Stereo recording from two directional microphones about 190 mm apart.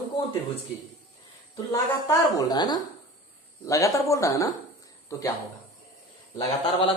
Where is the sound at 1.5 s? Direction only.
20° left (ahead or behind).